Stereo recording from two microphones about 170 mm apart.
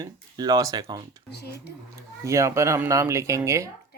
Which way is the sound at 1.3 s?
75° left (ahead or behind).